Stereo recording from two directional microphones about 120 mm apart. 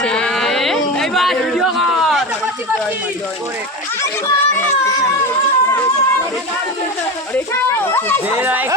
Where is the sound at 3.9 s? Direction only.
25° left (ahead or behind).